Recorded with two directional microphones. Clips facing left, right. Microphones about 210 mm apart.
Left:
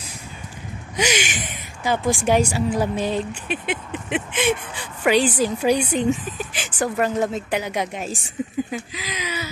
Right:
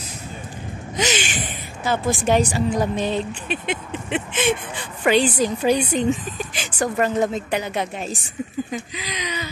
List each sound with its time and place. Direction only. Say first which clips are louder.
0.9 s speech: left 1 dB; 10° left (ahead or behind)
8.4 s speech: left 3 dB; 20° left (ahead or behind)
8.7 s speech: even; 5° left (ahead or behind)